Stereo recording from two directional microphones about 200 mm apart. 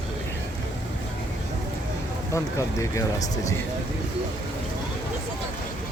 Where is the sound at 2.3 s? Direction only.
15° left (ahead or behind).